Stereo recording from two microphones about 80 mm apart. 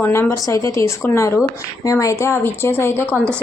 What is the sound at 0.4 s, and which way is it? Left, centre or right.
A woman's voice, left.